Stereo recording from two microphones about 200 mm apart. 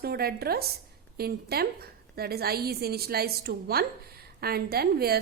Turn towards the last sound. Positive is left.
turn(degrees=-50)  # may be behind; listen again after turning